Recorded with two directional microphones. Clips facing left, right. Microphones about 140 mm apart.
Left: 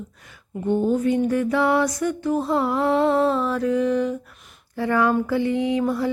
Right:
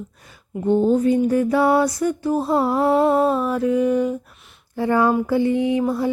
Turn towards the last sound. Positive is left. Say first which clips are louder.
# right 3 dB
turn(degrees=-25)  # may be behind; listen again after turning